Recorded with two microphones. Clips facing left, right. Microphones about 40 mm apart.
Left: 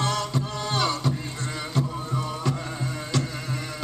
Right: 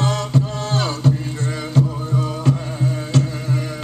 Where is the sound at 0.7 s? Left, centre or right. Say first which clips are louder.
Right 4 dB; right.